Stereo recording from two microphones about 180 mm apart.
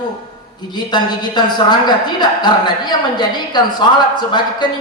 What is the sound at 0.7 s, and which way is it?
A woman's voice, 25° left (ahead or behind).